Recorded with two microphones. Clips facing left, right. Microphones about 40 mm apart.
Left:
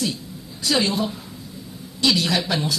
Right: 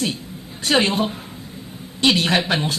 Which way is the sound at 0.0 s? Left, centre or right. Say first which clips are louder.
Right 2 dB; right.